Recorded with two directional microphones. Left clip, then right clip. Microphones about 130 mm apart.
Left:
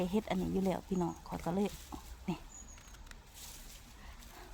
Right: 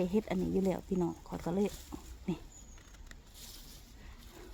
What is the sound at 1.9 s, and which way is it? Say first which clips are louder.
Dog: even; 75° left (ahead or behind).